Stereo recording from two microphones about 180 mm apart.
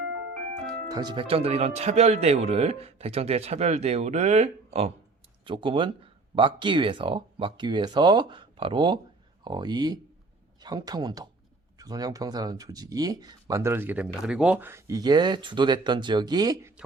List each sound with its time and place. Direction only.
0.9 s speech: 20° right (ahead or behind)